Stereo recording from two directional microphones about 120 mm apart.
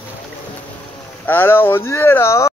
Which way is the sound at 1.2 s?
20° left (ahead or behind).